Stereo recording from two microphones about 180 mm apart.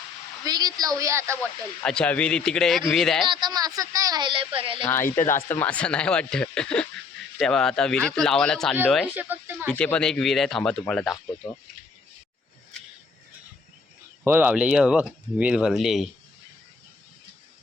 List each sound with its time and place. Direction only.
0.4 s speech: 20° right (ahead or behind)
1.8 s speech: 5° left (ahead or behind)
3.2 s speech: 25° right (ahead or behind)
4.8 s speech: 15° left (ahead or behind)
5.0 s speech: 45° left (ahead or behind)
5.5 s speech: 10° left (ahead or behind)
9.1 s speech: 10° right (ahead or behind)
9.6 s speech: 5° left (ahead or behind)
14.3 s speech: 10° right (ahead or behind)